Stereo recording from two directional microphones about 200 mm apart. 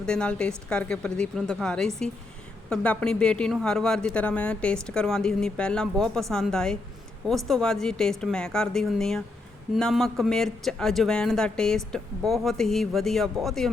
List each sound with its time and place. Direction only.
0.0 s speech: 5° left (ahead or behind)